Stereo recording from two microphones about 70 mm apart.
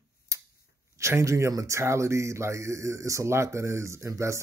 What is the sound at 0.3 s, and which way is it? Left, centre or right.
Tick-tock, right.